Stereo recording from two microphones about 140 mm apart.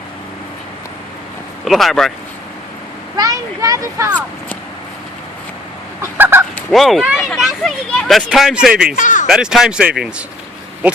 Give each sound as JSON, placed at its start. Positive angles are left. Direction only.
{"t": 1.6, "sound": "speech", "side_deg": 0}
{"t": 3.2, "sound": "speech", "side_deg": -25}
{"t": 6.0, "sound": "fowl", "side_deg": -15}
{"t": 6.6, "sound": "speech", "side_deg": 0}
{"t": 9.0, "sound": "speech", "side_deg": 70}
{"t": 9.2, "sound": "speech", "side_deg": -5}